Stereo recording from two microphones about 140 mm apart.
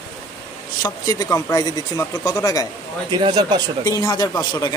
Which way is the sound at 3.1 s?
30° right (ahead or behind).